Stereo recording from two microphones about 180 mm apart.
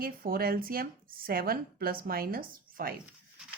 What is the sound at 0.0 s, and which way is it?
A woman's voice, 55° right (ahead or behind).